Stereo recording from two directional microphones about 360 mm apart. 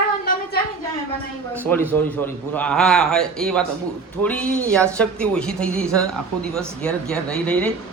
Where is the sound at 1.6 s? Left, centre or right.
Centre.